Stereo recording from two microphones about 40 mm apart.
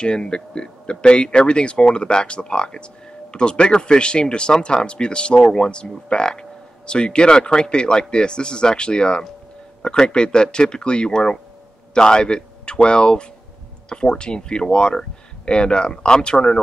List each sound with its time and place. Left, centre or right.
0.0 s speech: left